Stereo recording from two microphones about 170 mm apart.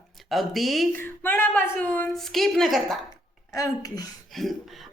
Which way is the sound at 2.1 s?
Centre (ahead or behind).